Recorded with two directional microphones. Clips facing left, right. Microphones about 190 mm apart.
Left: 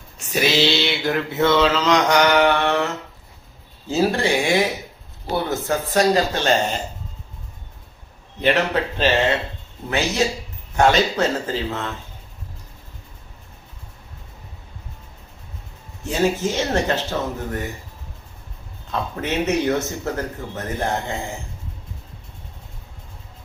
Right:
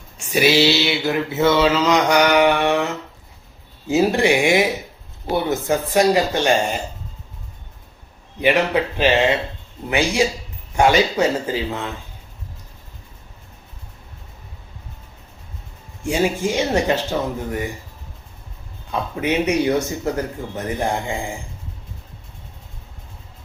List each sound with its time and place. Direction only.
0.3 s mantra: 10° right (ahead or behind)
3.8 s mantra: 15° right (ahead or behind)
8.4 s mantra: 10° right (ahead or behind)
10.8 s mantra: 10° right (ahead or behind)
16.0 s mantra: 10° right (ahead or behind)
18.9 s mantra: 10° right (ahead or behind)